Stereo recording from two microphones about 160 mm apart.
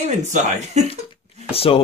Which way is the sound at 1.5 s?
40° left (ahead or behind).